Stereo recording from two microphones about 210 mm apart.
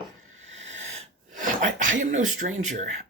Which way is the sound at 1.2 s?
35° right (ahead or behind).